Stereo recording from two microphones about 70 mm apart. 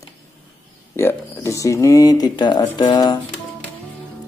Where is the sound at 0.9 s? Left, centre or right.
Left.